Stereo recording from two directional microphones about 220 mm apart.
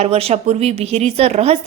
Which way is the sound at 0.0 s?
25° right (ahead or behind).